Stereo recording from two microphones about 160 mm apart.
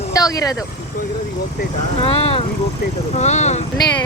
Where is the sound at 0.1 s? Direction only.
20° left (ahead or behind).